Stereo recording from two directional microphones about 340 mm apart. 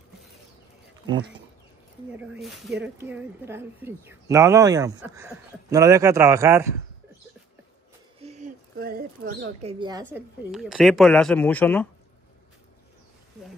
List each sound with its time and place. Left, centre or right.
2.1 s speech: centre
8.2 s a sound: centre
9.6 s a woman's voice: centre